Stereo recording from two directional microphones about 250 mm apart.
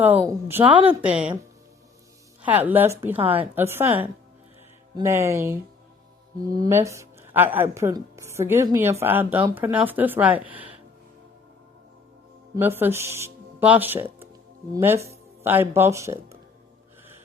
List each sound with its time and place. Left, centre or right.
0.0 s speech: centre
0.6 s a woman's voice: right
1.0 s a woman's voice: centre
2.4 s speech: centre
4.9 s speech: centre
12.5 s speech: centre